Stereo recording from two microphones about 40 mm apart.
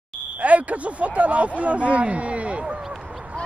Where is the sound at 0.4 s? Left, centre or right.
Right.